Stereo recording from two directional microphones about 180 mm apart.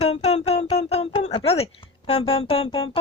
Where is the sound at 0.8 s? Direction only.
35° left (ahead or behind).